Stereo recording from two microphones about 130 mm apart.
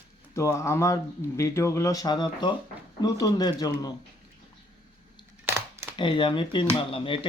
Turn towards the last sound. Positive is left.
turn(degrees=40)  # may be behind; listen again after turning